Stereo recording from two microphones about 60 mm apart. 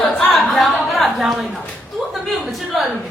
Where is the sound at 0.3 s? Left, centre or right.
Centre.